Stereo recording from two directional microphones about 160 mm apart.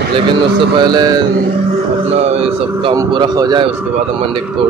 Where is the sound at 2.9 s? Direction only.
25° right (ahead or behind).